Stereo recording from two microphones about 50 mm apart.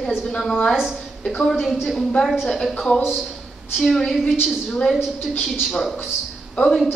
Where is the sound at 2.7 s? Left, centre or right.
Centre.